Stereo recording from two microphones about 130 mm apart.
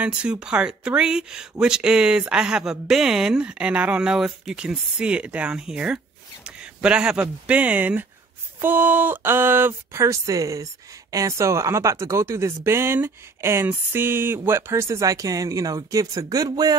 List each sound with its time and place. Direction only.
0.0 s speech: 10° right (ahead or behind); by 16.7 s 30° right (ahead or behind)